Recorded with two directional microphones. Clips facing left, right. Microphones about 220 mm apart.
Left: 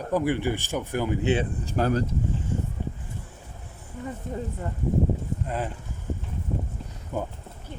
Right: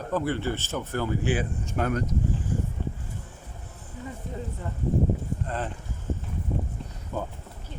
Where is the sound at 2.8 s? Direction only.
15° left (ahead or behind).